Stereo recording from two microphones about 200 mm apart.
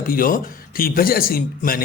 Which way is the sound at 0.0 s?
45° left (ahead or behind).